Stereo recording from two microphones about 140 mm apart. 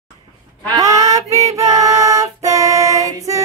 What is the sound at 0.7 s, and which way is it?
Female singing, 25° right (ahead or behind).